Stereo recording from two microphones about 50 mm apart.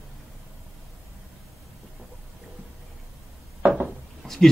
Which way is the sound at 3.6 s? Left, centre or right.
Right.